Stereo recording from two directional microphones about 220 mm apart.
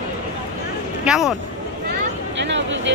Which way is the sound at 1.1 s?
Centre (ahead or behind).